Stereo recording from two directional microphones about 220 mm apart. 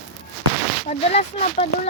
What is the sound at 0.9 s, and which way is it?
Speech, 30° left (ahead or behind).